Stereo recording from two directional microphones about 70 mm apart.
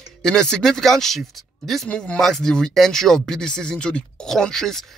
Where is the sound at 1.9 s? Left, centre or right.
Centre.